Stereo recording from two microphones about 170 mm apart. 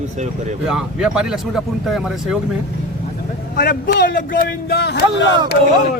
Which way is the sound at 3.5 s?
55° left (ahead or behind).